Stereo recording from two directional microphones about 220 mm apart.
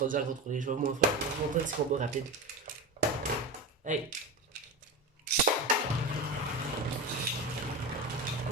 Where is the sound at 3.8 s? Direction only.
35° right (ahead or behind).